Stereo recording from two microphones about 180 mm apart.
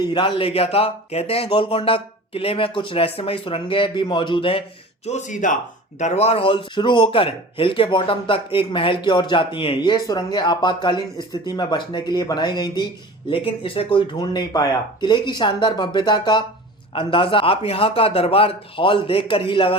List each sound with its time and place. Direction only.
0.0 s speech: 25° left (ahead or behind)
5.0 s speech: 40° left (ahead or behind)